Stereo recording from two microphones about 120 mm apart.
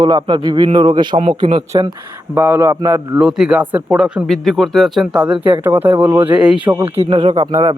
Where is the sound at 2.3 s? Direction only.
15° right (ahead or behind).